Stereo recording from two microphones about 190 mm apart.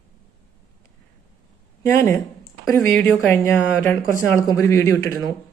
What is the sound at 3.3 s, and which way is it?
Speech, 10° left (ahead or behind).